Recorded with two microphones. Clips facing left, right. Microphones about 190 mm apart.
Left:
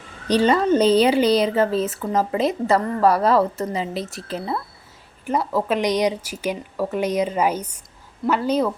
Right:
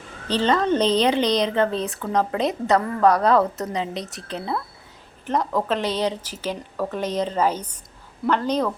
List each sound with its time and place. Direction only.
0.3 s a woman's voice: 10° left (ahead or behind)